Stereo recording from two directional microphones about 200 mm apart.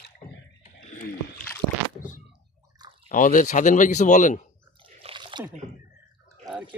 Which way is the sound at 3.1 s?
40° left (ahead or behind).